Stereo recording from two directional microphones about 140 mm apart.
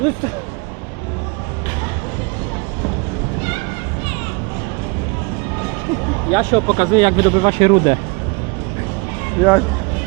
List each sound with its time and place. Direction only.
6.3 s speech: 35° right (ahead or behind)
9.4 s speech: 5° left (ahead or behind)